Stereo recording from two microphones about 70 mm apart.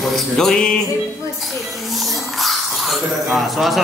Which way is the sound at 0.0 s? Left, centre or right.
Centre.